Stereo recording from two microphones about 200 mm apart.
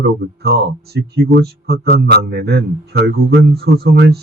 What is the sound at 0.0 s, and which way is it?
Speech, 55° right (ahead or behind).